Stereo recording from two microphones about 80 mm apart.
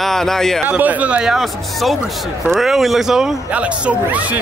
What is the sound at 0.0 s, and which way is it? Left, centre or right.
Speech, centre.